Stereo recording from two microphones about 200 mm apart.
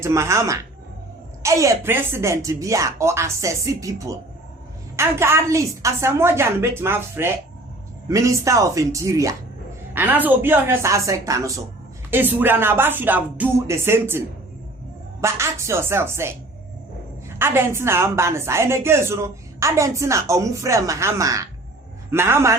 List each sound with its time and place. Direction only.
0.0 s a woman's voice: 15° right (ahead or behind)